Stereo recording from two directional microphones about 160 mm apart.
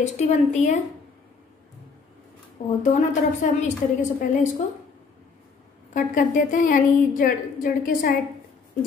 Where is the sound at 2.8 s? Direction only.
50° left (ahead or behind).